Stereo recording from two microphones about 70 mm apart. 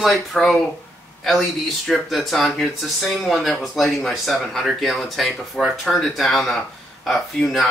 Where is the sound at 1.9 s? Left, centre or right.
Centre.